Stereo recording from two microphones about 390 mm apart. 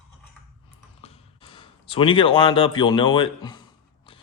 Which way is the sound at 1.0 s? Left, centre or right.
Centre.